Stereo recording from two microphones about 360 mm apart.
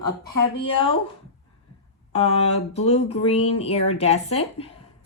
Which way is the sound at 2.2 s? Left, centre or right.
Centre.